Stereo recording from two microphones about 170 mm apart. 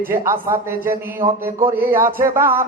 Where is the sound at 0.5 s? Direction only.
20° right (ahead or behind).